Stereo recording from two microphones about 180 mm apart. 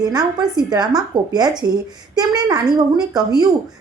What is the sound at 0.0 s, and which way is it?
A woman's voice, 20° right (ahead or behind).